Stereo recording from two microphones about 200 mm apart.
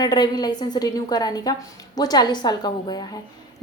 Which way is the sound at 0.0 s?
20° left (ahead or behind).